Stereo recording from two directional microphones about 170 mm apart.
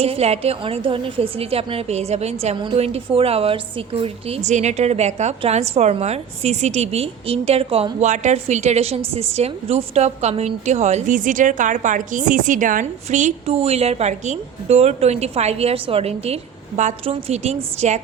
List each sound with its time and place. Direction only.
0.0 s a woman's voice: 35° right (ahead or behind)